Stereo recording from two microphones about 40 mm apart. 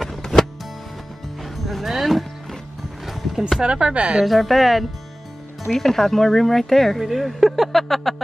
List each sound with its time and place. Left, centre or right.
0.0 s music: centre
3.6 s speech: right
4.2 s speech: centre
7.0 s speech: centre